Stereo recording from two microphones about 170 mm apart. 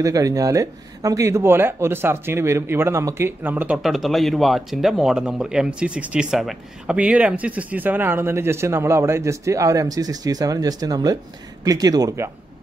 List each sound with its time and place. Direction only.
0.0 s speech: 20° right (ahead or behind)